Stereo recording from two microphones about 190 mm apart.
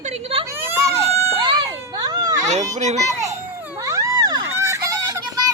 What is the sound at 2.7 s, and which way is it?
Speech, 35° right (ahead or behind).